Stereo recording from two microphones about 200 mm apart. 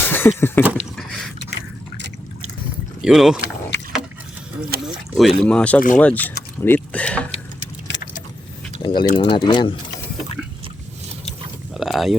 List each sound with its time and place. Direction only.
0.0 s a sound: 10° left (ahead or behind)
3.0 s speech: centre (ahead or behind)
4.7 s speech: 55° right (ahead or behind)
5.1 s speech: centre (ahead or behind)
7.9 s vehicle: 65° left (ahead or behind)
8.8 s speech: 25° left (ahead or behind)
11.7 s a sound: centre (ahead or behind)